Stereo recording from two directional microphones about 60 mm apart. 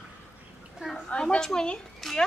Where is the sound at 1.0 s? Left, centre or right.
Centre.